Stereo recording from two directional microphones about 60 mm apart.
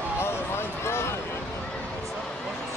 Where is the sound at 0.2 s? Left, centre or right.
Left.